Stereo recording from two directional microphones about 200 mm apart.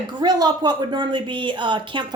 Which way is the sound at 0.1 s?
20° right (ahead or behind).